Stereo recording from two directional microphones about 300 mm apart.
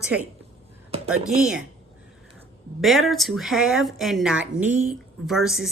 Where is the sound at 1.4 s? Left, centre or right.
Centre.